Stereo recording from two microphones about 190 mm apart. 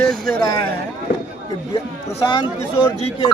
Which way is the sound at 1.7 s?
25° left (ahead or behind).